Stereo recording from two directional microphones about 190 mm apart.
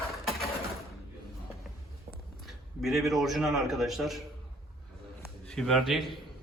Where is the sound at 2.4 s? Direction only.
Centre (ahead or behind).